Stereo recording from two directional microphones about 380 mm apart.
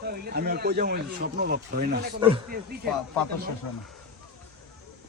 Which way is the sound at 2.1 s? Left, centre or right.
Centre.